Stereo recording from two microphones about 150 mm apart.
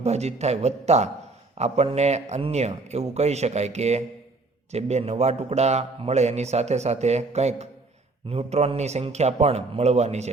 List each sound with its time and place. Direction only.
0.0 s a man's voice: 45° right (ahead or behind)